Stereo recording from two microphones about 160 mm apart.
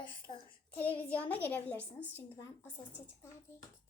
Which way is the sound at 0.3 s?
45° left (ahead or behind).